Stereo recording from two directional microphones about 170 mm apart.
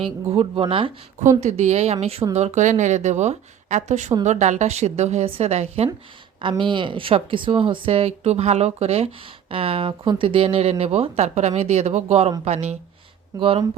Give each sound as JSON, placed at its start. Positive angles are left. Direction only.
{"t": 0.3, "sound": "speech", "side_deg": -30}
{"t": 1.4, "sound": "a woman's voice", "side_deg": -40}